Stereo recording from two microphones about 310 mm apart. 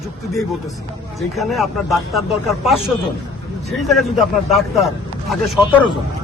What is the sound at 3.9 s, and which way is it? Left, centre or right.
A man's voice, centre.